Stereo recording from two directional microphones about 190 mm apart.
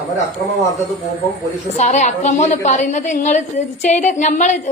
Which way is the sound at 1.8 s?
40° left (ahead or behind).